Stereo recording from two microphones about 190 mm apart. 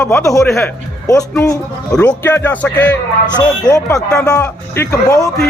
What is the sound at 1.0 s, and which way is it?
Speech, 15° left (ahead or behind).